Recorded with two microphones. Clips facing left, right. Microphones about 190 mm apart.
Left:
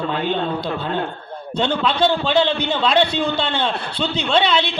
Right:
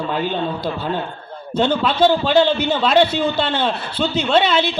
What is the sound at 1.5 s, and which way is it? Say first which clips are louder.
A man's voice: right 3 dB; 5° right (ahead or behind).